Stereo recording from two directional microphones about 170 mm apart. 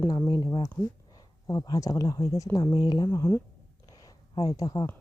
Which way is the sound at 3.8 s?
20° left (ahead or behind).